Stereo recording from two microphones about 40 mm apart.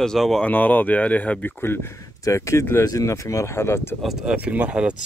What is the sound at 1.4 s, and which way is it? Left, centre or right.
Speech, left.